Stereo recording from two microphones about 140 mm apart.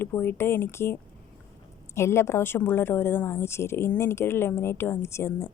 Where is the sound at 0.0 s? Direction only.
15° left (ahead or behind).